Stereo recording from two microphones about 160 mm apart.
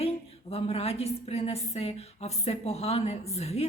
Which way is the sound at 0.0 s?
40° left (ahead or behind).